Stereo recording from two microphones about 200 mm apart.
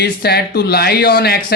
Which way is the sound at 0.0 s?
55° left (ahead or behind).